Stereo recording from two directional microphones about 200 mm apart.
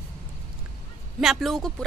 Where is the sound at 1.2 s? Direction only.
Centre (ahead or behind).